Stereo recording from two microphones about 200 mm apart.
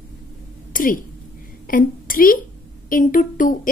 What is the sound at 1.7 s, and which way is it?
A woman's voice, 45° left (ahead or behind).